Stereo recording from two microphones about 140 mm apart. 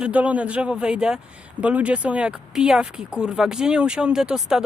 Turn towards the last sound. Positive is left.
turn(degrees=-5)  # may be behind; listen again after turning